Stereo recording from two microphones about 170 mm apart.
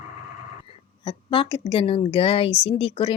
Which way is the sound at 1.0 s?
30° left (ahead or behind).